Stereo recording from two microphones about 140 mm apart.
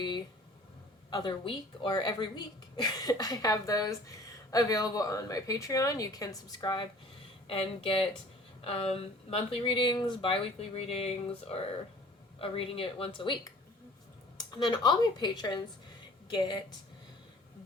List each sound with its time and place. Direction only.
1.1 s a woman's voice: 35° left (ahead or behind)
7.4 s speech: 40° left (ahead or behind)